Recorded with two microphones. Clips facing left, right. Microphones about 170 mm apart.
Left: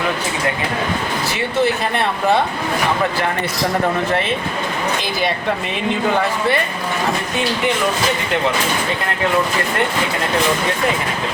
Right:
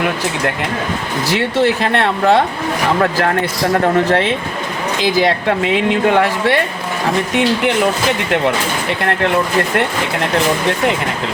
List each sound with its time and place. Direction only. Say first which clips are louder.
1.3 s speech: right 4 dB; 90° right
4.1 s speech: right 4 dB; 90° right